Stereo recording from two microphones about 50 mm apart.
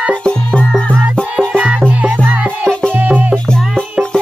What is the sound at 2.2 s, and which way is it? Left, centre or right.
Music, right.